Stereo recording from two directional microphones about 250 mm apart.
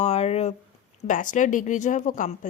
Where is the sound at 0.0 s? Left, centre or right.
Left.